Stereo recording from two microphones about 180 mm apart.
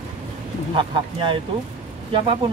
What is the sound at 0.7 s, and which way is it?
Speech, 30° right (ahead or behind).